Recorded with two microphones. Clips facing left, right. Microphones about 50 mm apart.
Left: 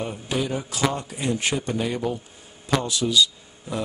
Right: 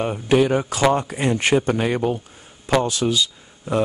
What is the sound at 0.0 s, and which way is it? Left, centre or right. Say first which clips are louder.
Speech: right 9 dB; right.